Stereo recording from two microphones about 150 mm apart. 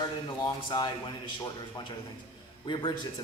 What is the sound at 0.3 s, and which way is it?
Speech, 30° left (ahead or behind).